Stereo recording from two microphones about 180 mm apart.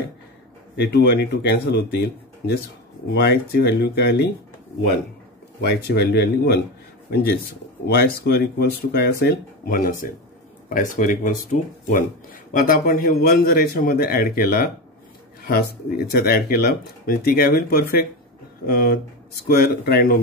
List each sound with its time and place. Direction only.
0.7 s a man's voice: 65° left (ahead or behind)
5.7 s speech: 65° left (ahead or behind)
7.8 s a man's voice: 65° left (ahead or behind)
16.1 s a man's voice: 60° left (ahead or behind)